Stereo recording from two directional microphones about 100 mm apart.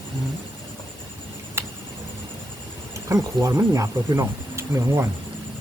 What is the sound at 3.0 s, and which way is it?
Speech, 30° right (ahead or behind).